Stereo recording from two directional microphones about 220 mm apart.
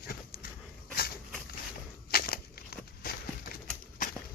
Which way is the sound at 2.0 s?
45° left (ahead or behind).